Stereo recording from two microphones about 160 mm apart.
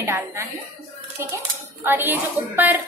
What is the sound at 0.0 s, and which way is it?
Speech, 20° right (ahead or behind).